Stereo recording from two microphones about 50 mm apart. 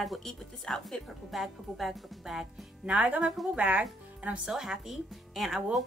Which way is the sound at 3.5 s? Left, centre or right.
Right.